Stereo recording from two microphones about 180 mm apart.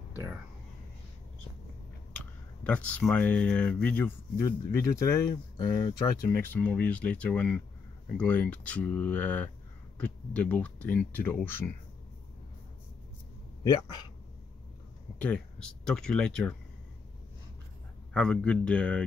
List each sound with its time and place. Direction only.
2.1 s speech: 5° left (ahead or behind)
13.7 s speech: 25° left (ahead or behind)
15.1 s speech: 5° left (ahead or behind)
18.1 s speech: 5° left (ahead or behind)